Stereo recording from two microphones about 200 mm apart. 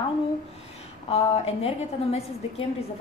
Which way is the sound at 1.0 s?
30° left (ahead or behind).